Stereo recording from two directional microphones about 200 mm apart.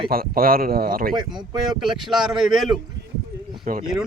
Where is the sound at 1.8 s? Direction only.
Centre (ahead or behind).